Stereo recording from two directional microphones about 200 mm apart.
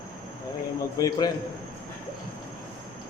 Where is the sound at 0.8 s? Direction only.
15° left (ahead or behind).